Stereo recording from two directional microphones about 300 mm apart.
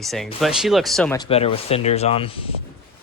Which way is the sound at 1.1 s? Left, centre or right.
Centre.